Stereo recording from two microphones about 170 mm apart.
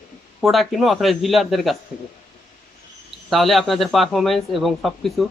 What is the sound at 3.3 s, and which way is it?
Speech, centre (ahead or behind).